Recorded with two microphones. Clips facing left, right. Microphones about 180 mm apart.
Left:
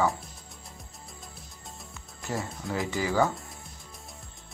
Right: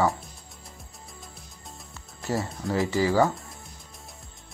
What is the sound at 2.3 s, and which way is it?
Speech, centre (ahead or behind).